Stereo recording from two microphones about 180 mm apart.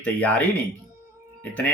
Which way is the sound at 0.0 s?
10° left (ahead or behind).